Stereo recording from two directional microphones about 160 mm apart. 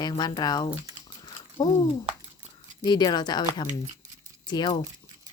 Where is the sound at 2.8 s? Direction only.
25° left (ahead or behind).